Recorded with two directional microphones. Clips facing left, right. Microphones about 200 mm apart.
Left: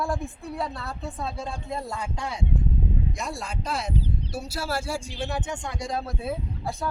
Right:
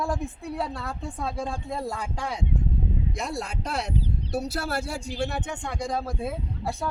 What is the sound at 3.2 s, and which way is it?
Speech, 60° right (ahead or behind).